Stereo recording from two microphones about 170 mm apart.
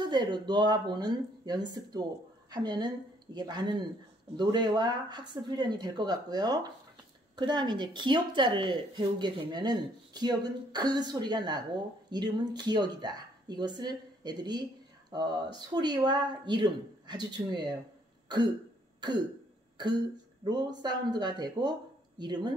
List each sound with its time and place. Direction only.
0.0 s speech: 25° right (ahead or behind)
20.4 s speech: 25° right (ahead or behind)